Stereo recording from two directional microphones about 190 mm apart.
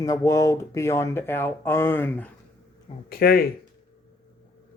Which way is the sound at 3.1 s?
50° left (ahead or behind).